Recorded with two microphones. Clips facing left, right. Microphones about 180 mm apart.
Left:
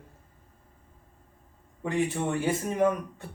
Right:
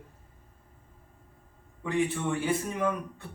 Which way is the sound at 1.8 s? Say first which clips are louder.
Left 1 dB; 45° left (ahead or behind).